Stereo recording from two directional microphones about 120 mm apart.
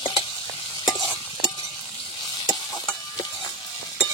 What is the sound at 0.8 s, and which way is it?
Stir, 35° left (ahead or behind).